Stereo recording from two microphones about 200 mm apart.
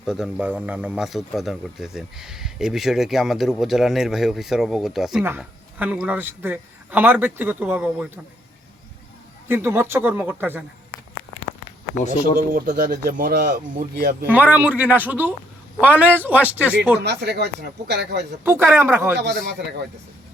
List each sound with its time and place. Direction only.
0.0 s speech: 5° right (ahead or behind)
9.5 s speech: 10° right (ahead or behind)
11.9 s speech: 35° left (ahead or behind)
12.4 s speech: 45° right (ahead or behind)
14.3 s speech: 10° right (ahead or behind)
17.0 s speech: 55° right (ahead or behind)
18.4 s speech: 10° right (ahead or behind)
19.1 s speech: 55° right (ahead or behind)